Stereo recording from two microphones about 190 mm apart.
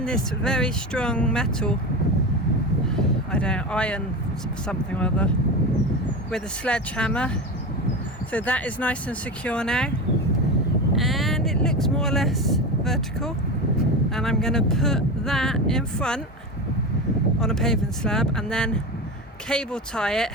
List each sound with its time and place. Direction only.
0.0 s speech: 5° left (ahead or behind)
2.9 s a sound: 5° left (ahead or behind)
4.6 s speech: 5° left (ahead or behind)
6.3 s speech: 5° left (ahead or behind)
10.9 s speech: centre (ahead or behind)
17.4 s speech: 5° left (ahead or behind)